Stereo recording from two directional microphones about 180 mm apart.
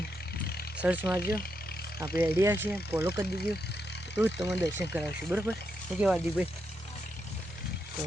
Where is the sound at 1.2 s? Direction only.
55° left (ahead or behind).